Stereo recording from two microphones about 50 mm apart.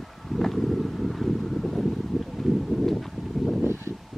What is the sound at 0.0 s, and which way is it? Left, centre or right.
Wind, centre.